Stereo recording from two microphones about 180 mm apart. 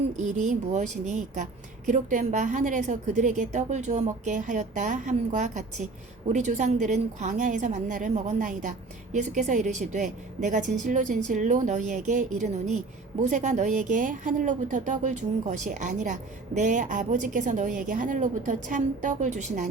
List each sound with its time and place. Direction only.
0.2 s a woman's voice: 40° right (ahead or behind)